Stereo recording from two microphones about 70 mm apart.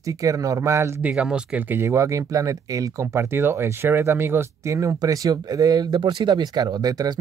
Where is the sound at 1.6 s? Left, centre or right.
Right.